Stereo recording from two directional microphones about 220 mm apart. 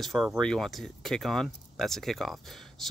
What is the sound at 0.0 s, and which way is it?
Speech, centre (ahead or behind).